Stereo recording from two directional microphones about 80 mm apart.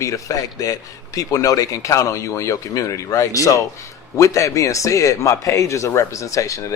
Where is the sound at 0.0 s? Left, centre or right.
Left.